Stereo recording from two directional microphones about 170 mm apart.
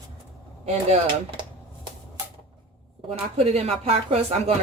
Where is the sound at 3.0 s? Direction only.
35° right (ahead or behind).